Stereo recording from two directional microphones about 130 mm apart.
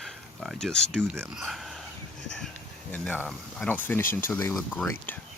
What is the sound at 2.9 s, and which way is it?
Speech, 10° left (ahead or behind).